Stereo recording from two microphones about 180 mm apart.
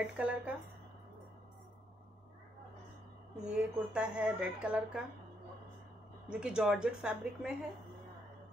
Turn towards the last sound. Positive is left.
turn(degrees=-5)  # may be behind; listen again after turning